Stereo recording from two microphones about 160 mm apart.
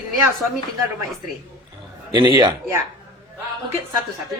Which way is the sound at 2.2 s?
30° right (ahead or behind).